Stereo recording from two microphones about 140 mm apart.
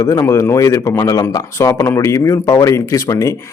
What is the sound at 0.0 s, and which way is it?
Speech, 20° left (ahead or behind).